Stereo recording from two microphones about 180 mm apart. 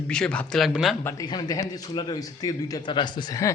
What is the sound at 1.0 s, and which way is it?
Speech, 20° left (ahead or behind).